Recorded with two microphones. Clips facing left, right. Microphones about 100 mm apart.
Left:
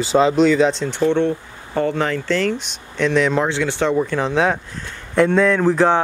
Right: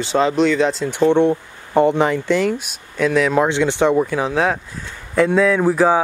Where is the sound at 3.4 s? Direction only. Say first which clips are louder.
Right 3 dB; 20° right (ahead or behind).